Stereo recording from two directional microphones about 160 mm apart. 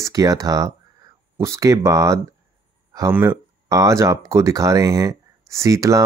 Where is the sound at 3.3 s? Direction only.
20° right (ahead or behind).